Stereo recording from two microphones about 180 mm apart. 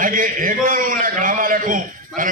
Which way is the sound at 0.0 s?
50° right (ahead or behind).